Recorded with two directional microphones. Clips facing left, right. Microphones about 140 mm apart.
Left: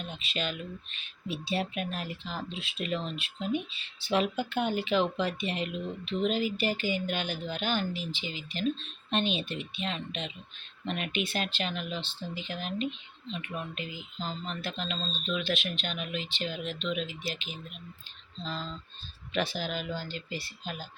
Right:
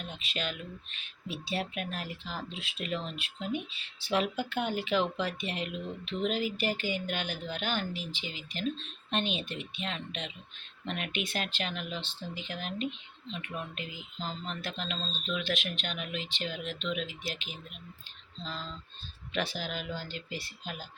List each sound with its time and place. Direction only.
0.0 s speech: 10° right (ahead or behind)
19.3 s speech: 10° right (ahead or behind)